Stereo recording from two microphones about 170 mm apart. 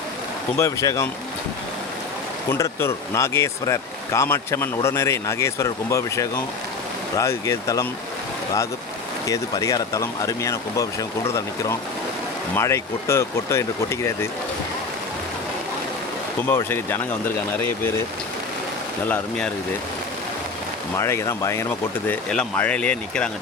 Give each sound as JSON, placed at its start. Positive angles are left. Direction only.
{"t": 0.5, "sound": "speech", "side_deg": 20}
{"t": 2.5, "sound": "speech", "side_deg": 15}
{"t": 9.2, "sound": "speech", "side_deg": 20}
{"t": 16.6, "sound": "speech", "side_deg": 15}
{"t": 19.0, "sound": "speech", "side_deg": 10}
{"t": 20.9, "sound": "speech", "side_deg": 15}